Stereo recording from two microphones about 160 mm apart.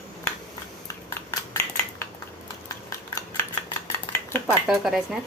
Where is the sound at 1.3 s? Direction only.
15° left (ahead or behind).